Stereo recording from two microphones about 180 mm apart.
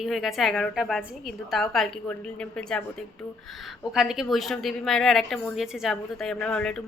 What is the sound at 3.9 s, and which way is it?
A woman's voice, centre (ahead or behind).